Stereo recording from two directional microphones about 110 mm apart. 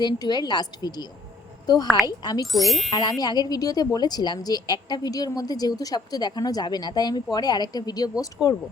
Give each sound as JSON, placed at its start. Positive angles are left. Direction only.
{"t": 0.0, "sound": "a woman's voice", "side_deg": 40}
{"t": 2.5, "sound": "speech", "side_deg": 0}
{"t": 2.9, "sound": "speech", "side_deg": 35}
{"t": 8.4, "sound": "speech", "side_deg": -5}